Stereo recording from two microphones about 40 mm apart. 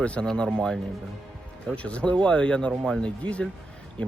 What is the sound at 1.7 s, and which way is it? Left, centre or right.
Speech, left.